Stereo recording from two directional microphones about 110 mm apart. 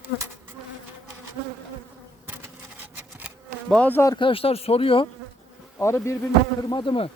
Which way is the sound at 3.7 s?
15° left (ahead or behind).